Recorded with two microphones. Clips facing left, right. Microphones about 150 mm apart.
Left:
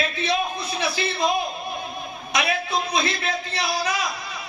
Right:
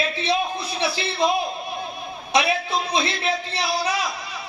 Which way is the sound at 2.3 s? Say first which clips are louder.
Right 3 dB; 30° right (ahead or behind).